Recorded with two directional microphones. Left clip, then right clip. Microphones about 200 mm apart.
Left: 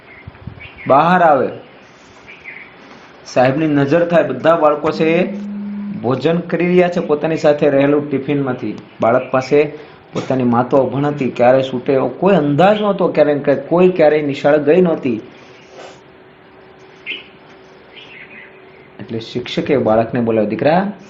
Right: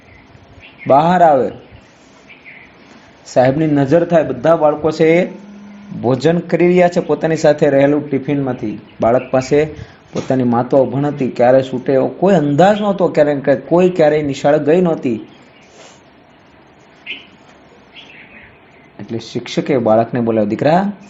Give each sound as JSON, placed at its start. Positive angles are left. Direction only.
{"t": 0.9, "sound": "speech", "side_deg": -45}
{"t": 3.3, "sound": "speech", "side_deg": -50}
{"t": 19.0, "sound": "speech", "side_deg": -50}